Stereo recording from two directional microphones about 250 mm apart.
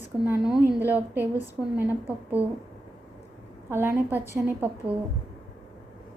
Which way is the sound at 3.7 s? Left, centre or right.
Centre.